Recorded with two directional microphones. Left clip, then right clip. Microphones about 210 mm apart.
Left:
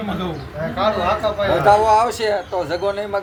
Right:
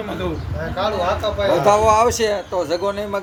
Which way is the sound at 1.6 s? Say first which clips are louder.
Left 1 dB; 40° right (ahead or behind).